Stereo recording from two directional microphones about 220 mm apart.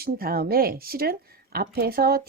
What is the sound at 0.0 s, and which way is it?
Speech, 45° right (ahead or behind).